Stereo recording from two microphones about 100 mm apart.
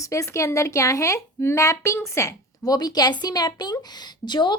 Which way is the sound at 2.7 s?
40° left (ahead or behind).